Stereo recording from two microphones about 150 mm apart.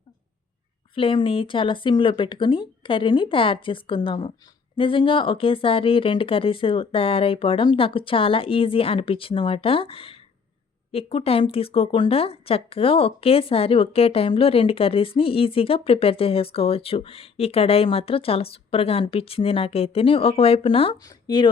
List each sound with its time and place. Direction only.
0.9 s speech: 35° left (ahead or behind)
21.0 s speech: 30° left (ahead or behind)